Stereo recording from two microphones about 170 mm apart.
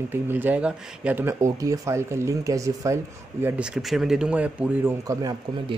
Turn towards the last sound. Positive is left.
turn(degrees=-20)  # may be behind; listen again after turning